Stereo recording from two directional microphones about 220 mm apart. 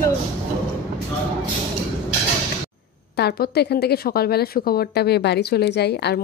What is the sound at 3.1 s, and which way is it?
Speech, 45° left (ahead or behind).